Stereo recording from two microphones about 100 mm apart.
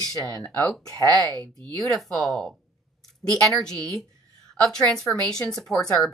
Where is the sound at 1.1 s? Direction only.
35° right (ahead or behind).